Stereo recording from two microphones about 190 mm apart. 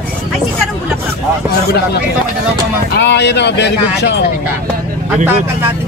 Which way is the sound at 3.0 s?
65° left (ahead or behind).